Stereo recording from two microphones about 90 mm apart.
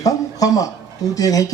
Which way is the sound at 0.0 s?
40° left (ahead or behind).